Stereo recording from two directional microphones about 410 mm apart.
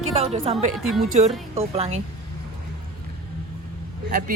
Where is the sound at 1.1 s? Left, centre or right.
Centre.